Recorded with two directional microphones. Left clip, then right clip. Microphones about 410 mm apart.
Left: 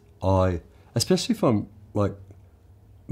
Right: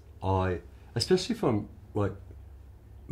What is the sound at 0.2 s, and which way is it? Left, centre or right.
Speech, left.